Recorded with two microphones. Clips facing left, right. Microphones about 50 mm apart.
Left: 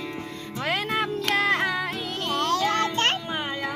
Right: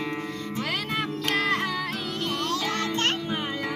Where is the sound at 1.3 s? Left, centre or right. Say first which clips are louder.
Left 3 dB; left.